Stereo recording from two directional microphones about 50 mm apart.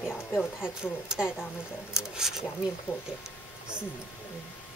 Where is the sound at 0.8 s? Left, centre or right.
Centre.